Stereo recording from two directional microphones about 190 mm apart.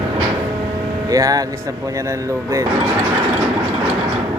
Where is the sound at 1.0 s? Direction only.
20° right (ahead or behind).